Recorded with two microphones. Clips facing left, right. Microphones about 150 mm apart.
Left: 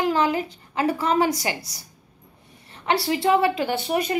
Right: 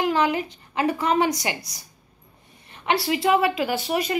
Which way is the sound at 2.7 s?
30° left (ahead or behind).